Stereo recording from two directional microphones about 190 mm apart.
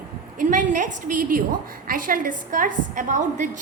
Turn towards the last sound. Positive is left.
turn(degrees=-40)  # may be behind; listen again after turning